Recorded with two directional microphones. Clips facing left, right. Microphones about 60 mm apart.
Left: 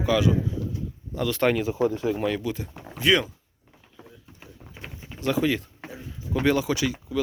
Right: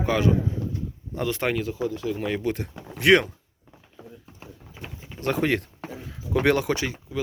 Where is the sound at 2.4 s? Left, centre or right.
Right.